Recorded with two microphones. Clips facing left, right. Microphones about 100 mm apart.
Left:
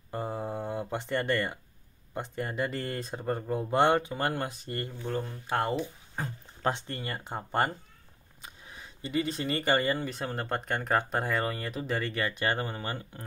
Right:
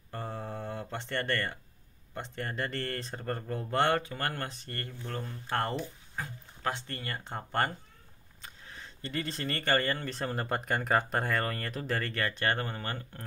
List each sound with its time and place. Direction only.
0.1 s mantra: 15° left (ahead or behind)
0.9 s speech: 15° left (ahead or behind)
6.1 s speech: 30° left (ahead or behind); by 13.2 s 15° left (ahead or behind)